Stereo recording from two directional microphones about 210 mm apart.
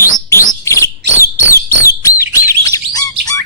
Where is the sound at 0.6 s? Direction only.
15° left (ahead or behind).